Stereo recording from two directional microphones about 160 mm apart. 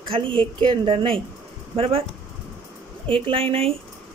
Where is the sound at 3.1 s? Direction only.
35° right (ahead or behind).